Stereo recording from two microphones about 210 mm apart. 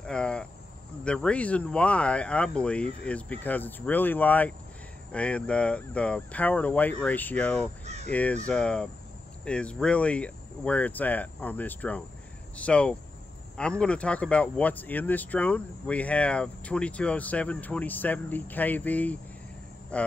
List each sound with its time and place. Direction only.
0.0 s a sound: 5° left (ahead or behind)
1.0 s speech: 5° left (ahead or behind)
7.8 s speech: 30° right (ahead or behind)
8.1 s speech: 5° left (ahead or behind)